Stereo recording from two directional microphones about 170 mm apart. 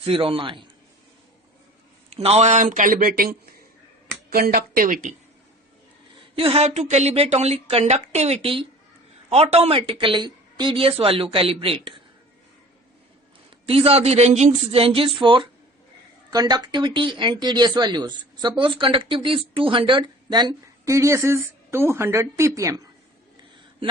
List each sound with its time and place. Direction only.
0.0 s a woman's voice: 30° right (ahead or behind)
2.0 s speech: 35° right (ahead or behind)
6.1 s a woman's voice: 35° right (ahead or behind)
13.7 s a woman's voice: 35° right (ahead or behind); by 22.9 s 20° right (ahead or behind)